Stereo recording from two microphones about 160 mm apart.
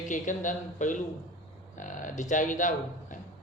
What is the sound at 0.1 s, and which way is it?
Speech, 50° left (ahead or behind).